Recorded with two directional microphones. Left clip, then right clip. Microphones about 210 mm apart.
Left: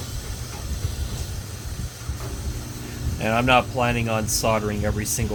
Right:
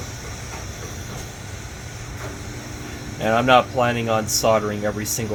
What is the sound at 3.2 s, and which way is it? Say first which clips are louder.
Speech: right 3 dB; 45° left (ahead or behind).